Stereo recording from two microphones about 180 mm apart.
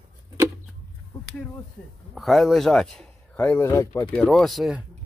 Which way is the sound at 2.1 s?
Centre (ahead or behind).